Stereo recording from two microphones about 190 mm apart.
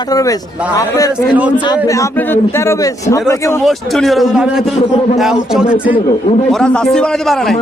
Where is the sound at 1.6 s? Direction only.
20° left (ahead or behind).